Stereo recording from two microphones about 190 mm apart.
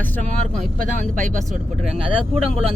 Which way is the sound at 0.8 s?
40° right (ahead or behind).